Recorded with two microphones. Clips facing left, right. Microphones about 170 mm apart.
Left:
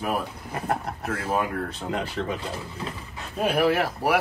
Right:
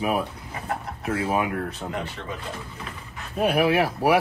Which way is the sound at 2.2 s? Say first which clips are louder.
Left 7 dB; 40° left (ahead or behind).